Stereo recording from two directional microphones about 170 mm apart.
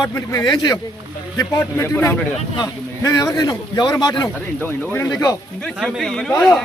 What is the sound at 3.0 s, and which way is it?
A man's voice, 20° left (ahead or behind).